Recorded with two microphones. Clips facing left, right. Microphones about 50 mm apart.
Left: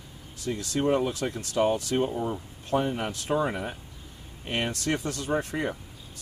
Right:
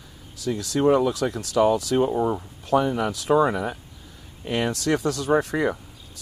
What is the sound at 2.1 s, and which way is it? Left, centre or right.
Speech, right.